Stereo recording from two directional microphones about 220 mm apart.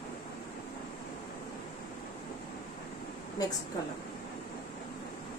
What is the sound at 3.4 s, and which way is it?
Speech, 15° left (ahead or behind).